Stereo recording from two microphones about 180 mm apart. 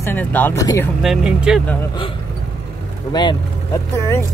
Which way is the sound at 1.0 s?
5° right (ahead or behind).